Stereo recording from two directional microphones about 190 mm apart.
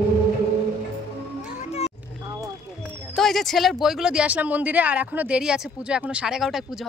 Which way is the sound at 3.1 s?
Centre (ahead or behind).